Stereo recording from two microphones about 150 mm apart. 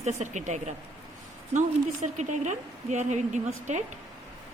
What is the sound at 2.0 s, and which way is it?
Speech, 55° right (ahead or behind).